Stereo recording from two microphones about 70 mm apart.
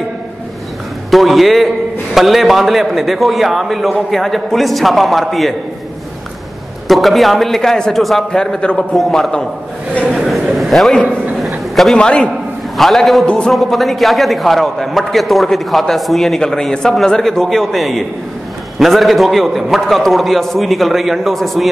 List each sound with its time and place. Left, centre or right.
1.1 s a man's voice: centre
6.9 s a man's voice: centre
12.7 s a man's voice: centre